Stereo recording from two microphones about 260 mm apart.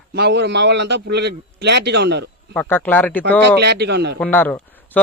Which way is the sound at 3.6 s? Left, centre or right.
Right.